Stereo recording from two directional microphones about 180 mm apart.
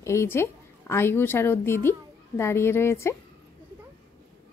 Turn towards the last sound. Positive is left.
turn(degrees=15)  # may be behind; listen again after turning